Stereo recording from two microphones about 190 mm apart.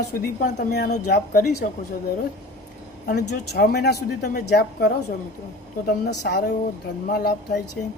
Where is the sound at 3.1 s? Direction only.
55° left (ahead or behind).